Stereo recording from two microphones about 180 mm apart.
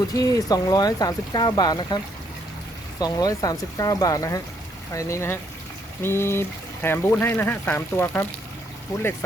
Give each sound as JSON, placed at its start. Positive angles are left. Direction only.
{"t": 0.1, "sound": "speech", "side_deg": 20}
{"t": 3.0, "sound": "speech", "side_deg": 20}